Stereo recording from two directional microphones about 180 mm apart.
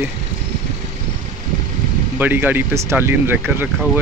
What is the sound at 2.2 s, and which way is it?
Speech, 10° right (ahead or behind).